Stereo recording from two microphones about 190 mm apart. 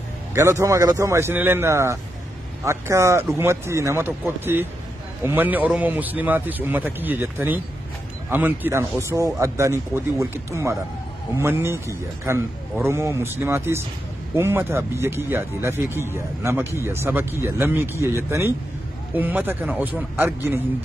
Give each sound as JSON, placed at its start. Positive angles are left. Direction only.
{"t": 0.3, "sound": "speech", "side_deg": -15}